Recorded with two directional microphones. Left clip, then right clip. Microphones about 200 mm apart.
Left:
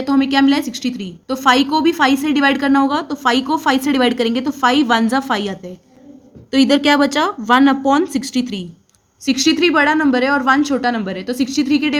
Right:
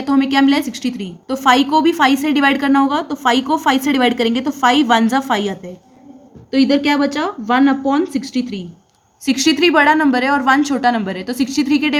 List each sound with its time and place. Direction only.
0.0 s a woman's voice: 5° left (ahead or behind)
6.5 s speech: 25° left (ahead or behind)
9.2 s speech: centre (ahead or behind)